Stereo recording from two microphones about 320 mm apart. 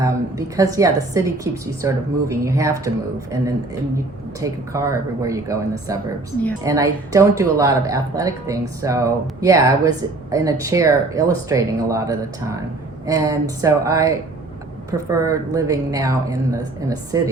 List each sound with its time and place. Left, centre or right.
0.0 s speech: centre
4.4 s speech: centre